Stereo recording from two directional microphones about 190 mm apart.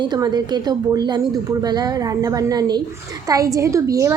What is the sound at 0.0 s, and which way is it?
A woman's voice, 20° right (ahead or behind).